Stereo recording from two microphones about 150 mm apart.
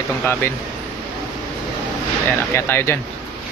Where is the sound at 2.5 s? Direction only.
15° left (ahead or behind).